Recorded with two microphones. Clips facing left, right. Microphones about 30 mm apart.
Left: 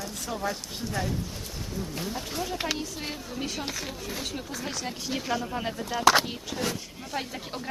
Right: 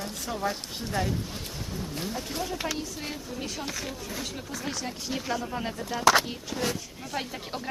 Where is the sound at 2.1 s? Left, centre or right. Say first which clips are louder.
Even; centre.